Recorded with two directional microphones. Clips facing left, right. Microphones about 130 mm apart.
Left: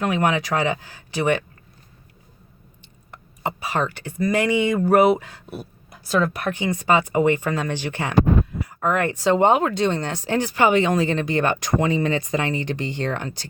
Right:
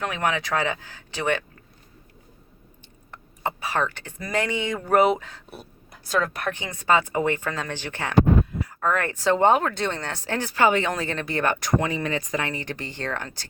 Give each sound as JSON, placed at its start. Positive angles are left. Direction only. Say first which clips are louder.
{"t": 0.0, "sound": "speech", "louder": "left 5 dB", "side_deg": 10}
{"t": 3.1, "sound": "speech", "louder": "left 1 dB", "side_deg": 15}